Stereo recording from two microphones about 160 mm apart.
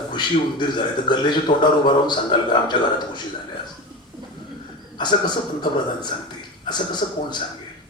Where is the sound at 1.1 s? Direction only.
30° left (ahead or behind).